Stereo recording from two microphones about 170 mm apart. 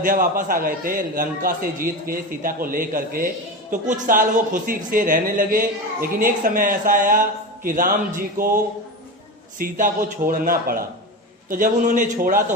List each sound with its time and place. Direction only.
0.0 s a man's voice: 55° right (ahead or behind)